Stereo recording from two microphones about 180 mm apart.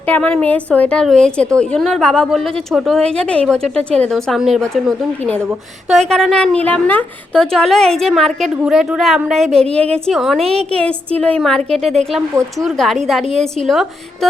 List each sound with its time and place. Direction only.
0.0 s a woman's voice: 10° left (ahead or behind)
10.4 s a woman's voice: 35° right (ahead or behind)
10.7 s a woman's voice: 5° left (ahead or behind)